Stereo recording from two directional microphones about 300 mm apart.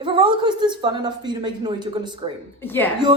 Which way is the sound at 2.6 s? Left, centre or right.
Centre.